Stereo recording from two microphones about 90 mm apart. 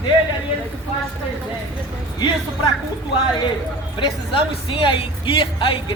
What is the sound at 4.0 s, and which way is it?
A man's voice, 80° left.